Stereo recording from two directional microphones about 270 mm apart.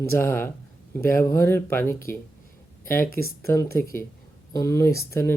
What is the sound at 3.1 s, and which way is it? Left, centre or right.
Speech, left.